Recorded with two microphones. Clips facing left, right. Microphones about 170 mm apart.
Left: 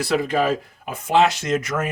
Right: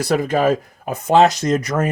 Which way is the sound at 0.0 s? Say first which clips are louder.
Right 3 dB; 45° right (ahead or behind).